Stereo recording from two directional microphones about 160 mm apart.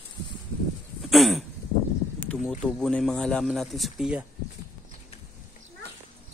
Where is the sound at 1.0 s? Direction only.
Centre (ahead or behind).